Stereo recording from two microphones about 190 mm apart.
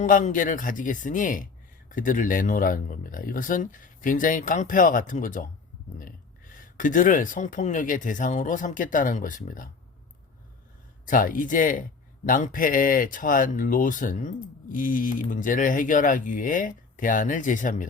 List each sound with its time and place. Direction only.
0.0 s speech: 45° left (ahead or behind)
11.1 s speech: 45° left (ahead or behind)